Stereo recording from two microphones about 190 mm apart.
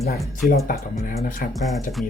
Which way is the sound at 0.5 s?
45° left (ahead or behind).